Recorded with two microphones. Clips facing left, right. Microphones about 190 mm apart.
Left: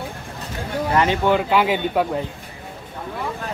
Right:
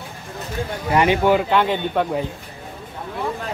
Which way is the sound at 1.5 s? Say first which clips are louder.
Even; 5° left (ahead or behind).